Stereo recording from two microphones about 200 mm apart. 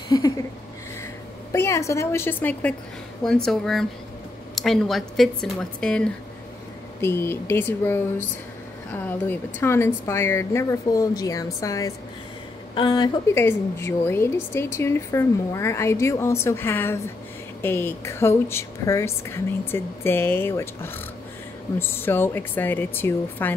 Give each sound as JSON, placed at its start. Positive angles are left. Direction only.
{"t": 0.1, "sound": "a woman's voice", "side_deg": 20}
{"t": 1.5, "sound": "a woman's voice", "side_deg": 15}
{"t": 13.3, "sound": "a woman's voice", "side_deg": 10}